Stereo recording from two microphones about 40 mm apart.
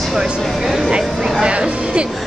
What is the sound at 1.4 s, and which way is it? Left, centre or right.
Speech, right.